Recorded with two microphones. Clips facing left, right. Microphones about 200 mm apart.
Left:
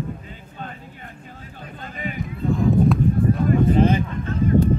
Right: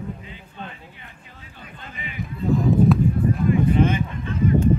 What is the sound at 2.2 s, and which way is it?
Music, centre (ahead or behind).